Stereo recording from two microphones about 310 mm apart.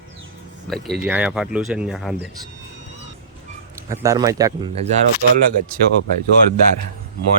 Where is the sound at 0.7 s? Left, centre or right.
Centre.